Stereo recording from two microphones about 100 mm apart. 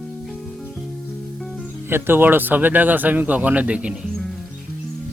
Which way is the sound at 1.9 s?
20° right (ahead or behind).